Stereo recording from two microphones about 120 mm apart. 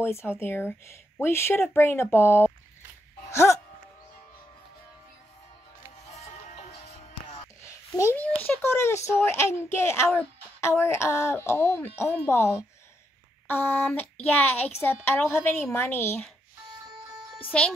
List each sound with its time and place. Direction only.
0.0 s a child's voice: 20° left (ahead or behind)
3.3 s music: 20° left (ahead or behind)
6.0 s music: 60° left (ahead or behind)
8.0 s a child's voice: 15° left (ahead or behind)
17.5 s speech: 10° left (ahead or behind)